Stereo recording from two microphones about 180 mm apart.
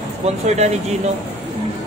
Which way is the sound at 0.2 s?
40° right (ahead or behind).